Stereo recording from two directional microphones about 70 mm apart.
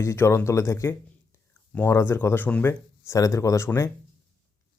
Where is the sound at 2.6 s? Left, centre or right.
Left.